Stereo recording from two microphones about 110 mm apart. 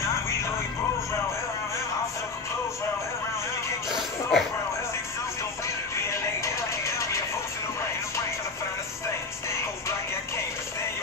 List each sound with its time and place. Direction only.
3.9 s music: centre (ahead or behind)
5.9 s music: 25° left (ahead or behind)